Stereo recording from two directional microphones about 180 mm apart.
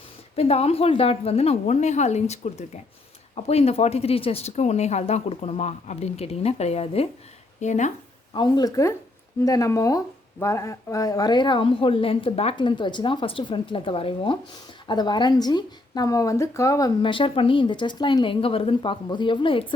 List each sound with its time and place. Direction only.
0.3 s speech: 35° left (ahead or behind)
8.3 s speech: 25° left (ahead or behind)